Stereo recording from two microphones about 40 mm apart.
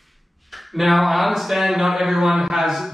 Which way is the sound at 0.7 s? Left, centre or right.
Centre.